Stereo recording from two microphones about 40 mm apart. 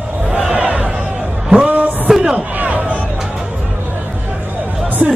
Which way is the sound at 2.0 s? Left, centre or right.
Centre.